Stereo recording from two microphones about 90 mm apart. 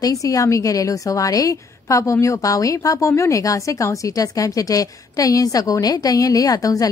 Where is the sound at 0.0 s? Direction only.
40° left (ahead or behind).